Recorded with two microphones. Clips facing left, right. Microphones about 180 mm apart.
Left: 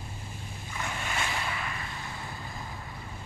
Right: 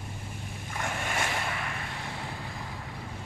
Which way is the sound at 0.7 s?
50° right (ahead or behind).